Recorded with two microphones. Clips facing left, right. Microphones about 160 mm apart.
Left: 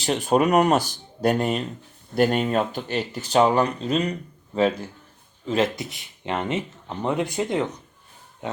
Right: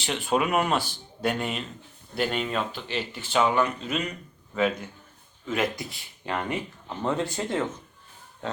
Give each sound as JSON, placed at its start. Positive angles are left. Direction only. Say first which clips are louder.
{"t": 0.0, "sound": "speech", "louder": "left 6 dB", "side_deg": 40}